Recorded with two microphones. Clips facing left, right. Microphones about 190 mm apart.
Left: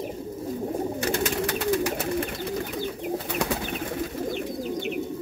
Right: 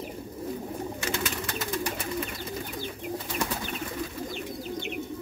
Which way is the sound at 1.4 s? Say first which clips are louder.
Left 7 dB; 75° left (ahead or behind).